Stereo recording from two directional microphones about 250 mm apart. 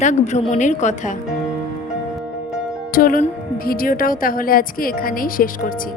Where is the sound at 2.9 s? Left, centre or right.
Left.